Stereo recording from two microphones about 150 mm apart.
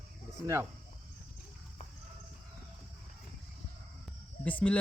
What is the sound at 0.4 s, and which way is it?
Speech, 20° right (ahead or behind).